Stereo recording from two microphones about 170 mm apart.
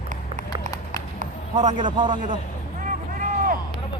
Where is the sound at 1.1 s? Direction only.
45° right (ahead or behind).